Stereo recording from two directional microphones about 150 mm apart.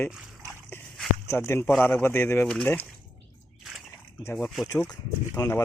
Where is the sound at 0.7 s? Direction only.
15° left (ahead or behind).